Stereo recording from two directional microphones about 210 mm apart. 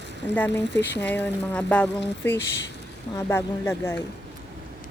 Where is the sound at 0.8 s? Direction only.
55° left (ahead or behind).